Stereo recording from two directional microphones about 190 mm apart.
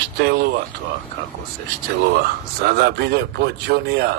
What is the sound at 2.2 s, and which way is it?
Speech, 55° right (ahead or behind).